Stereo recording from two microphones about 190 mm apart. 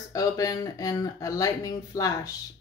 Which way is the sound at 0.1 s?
20° left (ahead or behind).